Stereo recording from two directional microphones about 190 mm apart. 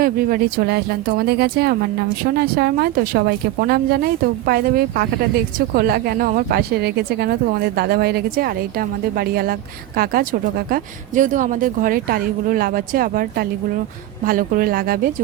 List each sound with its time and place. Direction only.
0.0 s speech: 50° right (ahead or behind)